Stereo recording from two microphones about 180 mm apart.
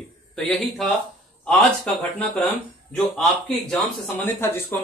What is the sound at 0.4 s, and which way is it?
Speech, centre (ahead or behind).